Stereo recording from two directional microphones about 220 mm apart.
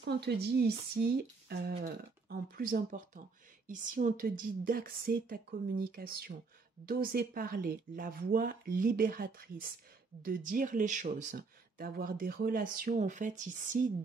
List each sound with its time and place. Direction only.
0.0 s speech: 50° right (ahead or behind)